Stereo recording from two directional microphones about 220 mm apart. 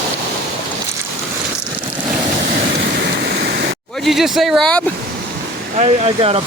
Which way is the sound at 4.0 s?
Centre (ahead or behind).